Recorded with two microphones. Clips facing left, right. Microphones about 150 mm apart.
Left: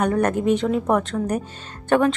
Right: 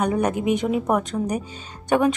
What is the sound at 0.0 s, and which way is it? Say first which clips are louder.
Speech: left 2 dB; 10° right (ahead or behind).